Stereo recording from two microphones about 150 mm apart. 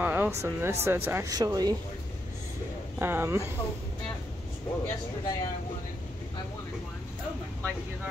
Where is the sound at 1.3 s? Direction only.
25° right (ahead or behind).